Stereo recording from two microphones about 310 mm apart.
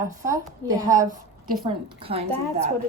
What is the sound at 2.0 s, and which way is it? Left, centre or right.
Speech, centre.